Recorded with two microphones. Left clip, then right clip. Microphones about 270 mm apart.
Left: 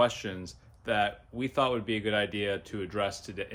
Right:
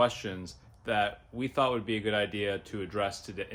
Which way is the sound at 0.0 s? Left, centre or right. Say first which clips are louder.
Left 1 dB; centre.